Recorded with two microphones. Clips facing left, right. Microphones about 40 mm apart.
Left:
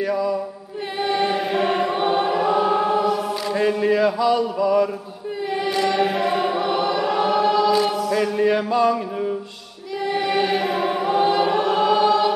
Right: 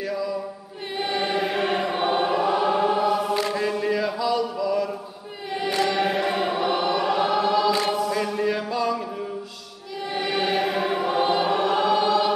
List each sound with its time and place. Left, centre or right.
0.0 s a capella: centre
0.9 s choir: centre
3.5 s chant: centre
5.8 s choir: centre
8.2 s chant: centre
8.5 s music: centre
10.1 s choir: centre